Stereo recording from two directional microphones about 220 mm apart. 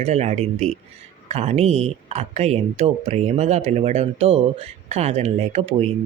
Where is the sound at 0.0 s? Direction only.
30° right (ahead or behind).